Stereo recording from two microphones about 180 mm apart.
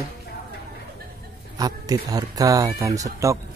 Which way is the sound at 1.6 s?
20° right (ahead or behind).